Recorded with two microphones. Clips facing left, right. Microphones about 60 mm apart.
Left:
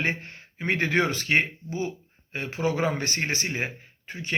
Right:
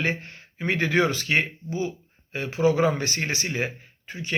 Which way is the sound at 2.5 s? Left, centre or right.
Left.